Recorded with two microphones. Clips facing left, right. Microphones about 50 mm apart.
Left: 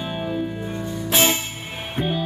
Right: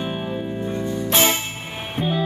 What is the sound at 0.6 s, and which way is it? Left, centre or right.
Music, centre.